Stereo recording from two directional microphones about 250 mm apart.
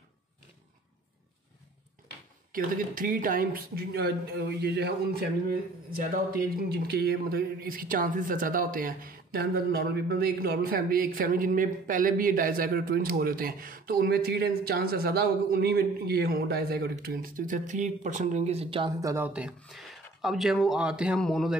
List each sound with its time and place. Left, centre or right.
2.5 s speech: right; by 21.5 s centre